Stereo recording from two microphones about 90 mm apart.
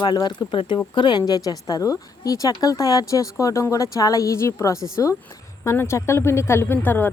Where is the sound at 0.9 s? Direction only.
55° left (ahead or behind).